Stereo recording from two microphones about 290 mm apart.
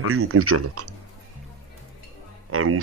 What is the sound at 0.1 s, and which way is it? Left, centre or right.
Speech, right.